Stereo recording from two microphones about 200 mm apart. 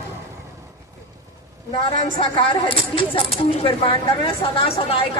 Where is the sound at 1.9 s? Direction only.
35° left (ahead or behind).